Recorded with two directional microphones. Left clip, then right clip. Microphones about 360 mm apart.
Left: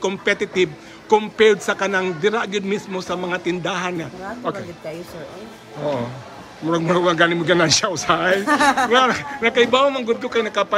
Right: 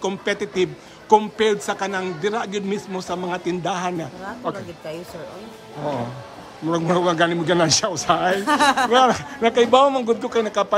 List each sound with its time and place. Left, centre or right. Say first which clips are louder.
0.0 s a man's voice: left 3 dB; centre
6.7 s a man's voice: left 2 dB; centre